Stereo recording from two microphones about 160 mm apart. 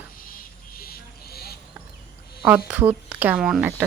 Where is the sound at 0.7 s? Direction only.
70° left (ahead or behind).